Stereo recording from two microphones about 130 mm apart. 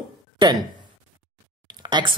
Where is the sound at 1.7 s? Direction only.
35° right (ahead or behind).